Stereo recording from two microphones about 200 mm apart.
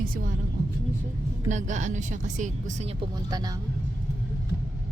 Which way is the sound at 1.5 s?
35° right (ahead or behind).